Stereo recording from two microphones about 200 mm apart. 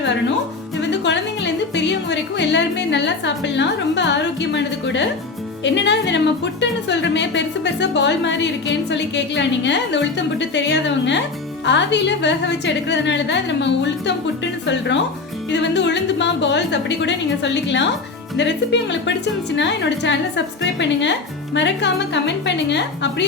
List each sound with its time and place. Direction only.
0.8 s music: 60° left (ahead or behind)
5.6 s speech: 60° left (ahead or behind)
15.7 s speech: 60° left (ahead or behind)